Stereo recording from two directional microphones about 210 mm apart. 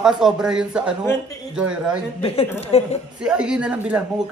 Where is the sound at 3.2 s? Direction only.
5° right (ahead or behind).